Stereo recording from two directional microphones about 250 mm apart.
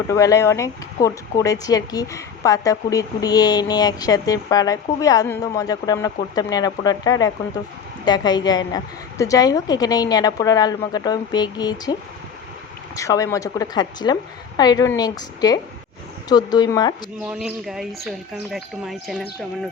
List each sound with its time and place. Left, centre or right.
0.1 s speech: centre
13.0 s speech: centre
17.2 s speech: centre